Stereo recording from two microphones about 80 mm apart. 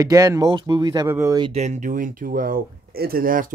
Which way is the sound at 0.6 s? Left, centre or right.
Right.